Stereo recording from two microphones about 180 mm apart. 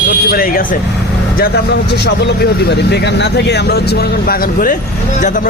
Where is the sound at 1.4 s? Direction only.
65° left (ahead or behind).